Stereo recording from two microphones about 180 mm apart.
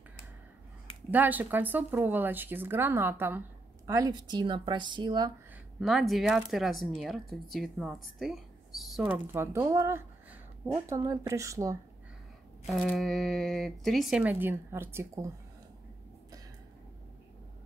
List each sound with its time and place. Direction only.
1.1 s speech: 10° right (ahead or behind)
5.8 s speech: centre (ahead or behind); by 11.8 s 15° right (ahead or behind)
12.8 s speech: 5° left (ahead or behind); by 15.3 s 15° right (ahead or behind)